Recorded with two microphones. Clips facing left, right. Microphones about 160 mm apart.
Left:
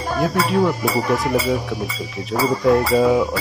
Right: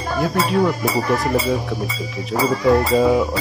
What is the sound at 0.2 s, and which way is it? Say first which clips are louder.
Speech: even; centre (ahead or behind).